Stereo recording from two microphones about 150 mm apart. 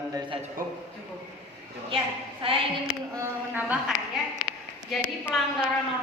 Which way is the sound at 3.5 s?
10° right (ahead or behind).